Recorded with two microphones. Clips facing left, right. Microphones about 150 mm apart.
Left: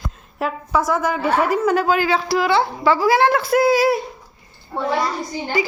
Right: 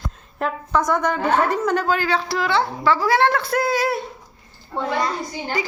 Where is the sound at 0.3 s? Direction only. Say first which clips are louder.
Left 1 dB; 5° left (ahead or behind).